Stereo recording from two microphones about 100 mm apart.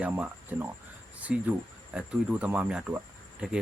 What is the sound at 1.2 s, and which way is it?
Speech, 10° right (ahead or behind).